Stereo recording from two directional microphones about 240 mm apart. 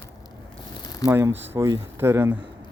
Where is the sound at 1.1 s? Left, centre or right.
Centre.